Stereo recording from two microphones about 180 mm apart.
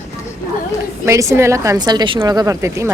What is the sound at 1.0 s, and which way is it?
A woman's voice, 15° right (ahead or behind).